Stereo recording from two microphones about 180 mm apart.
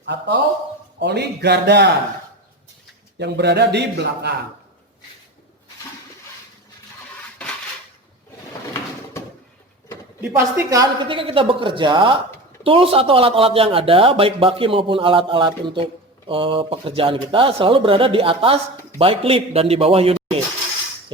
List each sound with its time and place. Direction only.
0.0 s a man's voice: 75° right (ahead or behind)
3.2 s a man's voice: 70° right (ahead or behind)
7.2 s dishes: 5° left (ahead or behind)
10.2 s a man's voice: 15° right (ahead or behind); by 20.1 s 35° right (ahead or behind)